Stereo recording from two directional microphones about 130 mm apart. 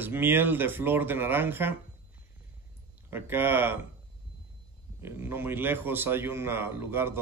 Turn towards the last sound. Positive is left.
turn(degrees=-20)  # may be behind; listen again after turning